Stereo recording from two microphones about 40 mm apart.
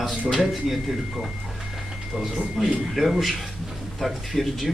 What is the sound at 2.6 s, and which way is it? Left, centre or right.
Speech, centre.